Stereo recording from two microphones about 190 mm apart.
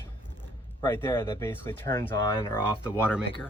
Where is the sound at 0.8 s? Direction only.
15° left (ahead or behind).